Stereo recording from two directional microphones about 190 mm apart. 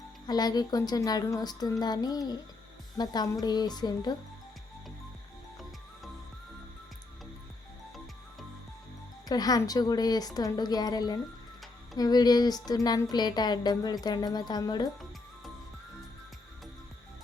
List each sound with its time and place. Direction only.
0.3 s speech: 20° left (ahead or behind)
9.3 s speech: 20° left (ahead or behind)